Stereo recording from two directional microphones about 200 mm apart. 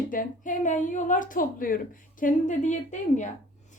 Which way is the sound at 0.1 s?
40° left (ahead or behind).